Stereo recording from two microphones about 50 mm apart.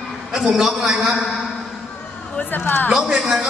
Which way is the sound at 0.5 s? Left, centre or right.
Centre.